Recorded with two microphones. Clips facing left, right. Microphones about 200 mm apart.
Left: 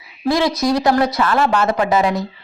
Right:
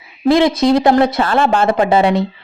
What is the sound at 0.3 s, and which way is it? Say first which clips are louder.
A woman's voice: right 5 dB; 20° right (ahead or behind).